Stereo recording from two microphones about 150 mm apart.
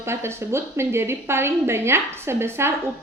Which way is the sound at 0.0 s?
15° right (ahead or behind).